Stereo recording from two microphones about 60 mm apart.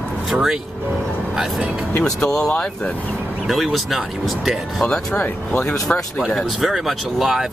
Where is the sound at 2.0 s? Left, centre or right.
Centre.